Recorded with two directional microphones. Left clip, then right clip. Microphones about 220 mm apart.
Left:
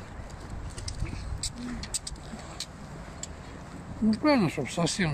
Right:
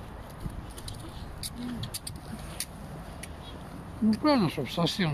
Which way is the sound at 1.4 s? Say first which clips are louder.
Left 1 dB; 15° right (ahead or behind).